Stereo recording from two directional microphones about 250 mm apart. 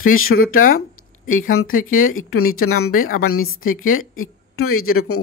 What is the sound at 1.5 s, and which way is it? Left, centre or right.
A woman's voice, left.